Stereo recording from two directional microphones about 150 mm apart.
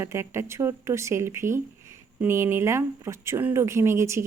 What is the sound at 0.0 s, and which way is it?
Speech, 20° right (ahead or behind).